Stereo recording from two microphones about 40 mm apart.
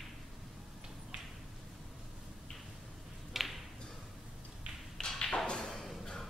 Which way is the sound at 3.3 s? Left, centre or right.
Centre.